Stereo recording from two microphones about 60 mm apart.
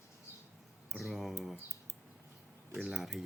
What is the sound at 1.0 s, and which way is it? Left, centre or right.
Speech, centre.